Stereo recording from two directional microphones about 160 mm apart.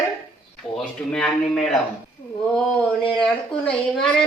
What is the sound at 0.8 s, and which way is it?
A woman's voice, 5° left (ahead or behind).